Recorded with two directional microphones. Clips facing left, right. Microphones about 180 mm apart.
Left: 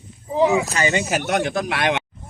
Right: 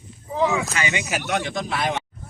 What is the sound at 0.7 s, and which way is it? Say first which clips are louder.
Speech: left 5 dB; 40° left (ahead or behind).